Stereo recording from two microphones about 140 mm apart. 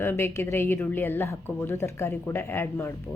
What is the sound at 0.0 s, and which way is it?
A woman's voice, 15° left (ahead or behind).